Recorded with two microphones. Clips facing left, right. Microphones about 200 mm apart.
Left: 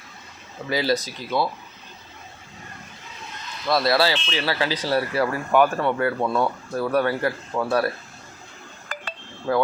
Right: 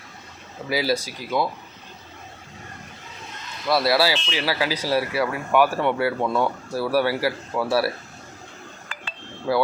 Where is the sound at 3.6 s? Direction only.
10° right (ahead or behind).